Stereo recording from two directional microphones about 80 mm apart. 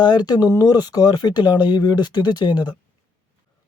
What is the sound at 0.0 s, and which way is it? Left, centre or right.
Speech, left.